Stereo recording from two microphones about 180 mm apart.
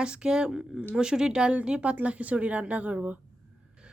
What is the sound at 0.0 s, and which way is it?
A woman's voice, 5° right (ahead or behind).